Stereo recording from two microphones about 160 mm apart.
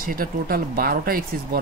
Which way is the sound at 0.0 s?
65° right (ahead or behind).